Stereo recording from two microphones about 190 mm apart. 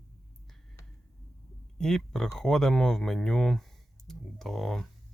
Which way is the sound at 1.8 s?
Centre (ahead or behind).